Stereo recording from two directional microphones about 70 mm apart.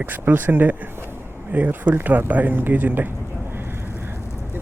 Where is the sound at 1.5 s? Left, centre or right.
Right.